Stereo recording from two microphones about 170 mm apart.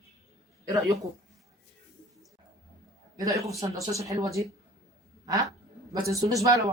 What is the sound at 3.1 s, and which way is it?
Speech, 20° right (ahead or behind).